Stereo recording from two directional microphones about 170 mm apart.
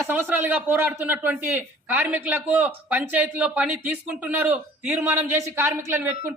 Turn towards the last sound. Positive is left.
turn(degrees=-15)  # may be behind; listen again after turning